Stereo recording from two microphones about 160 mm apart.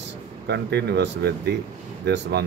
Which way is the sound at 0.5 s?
90° right.